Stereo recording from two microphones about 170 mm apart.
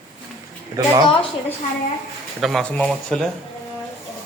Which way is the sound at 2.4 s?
Centre (ahead or behind).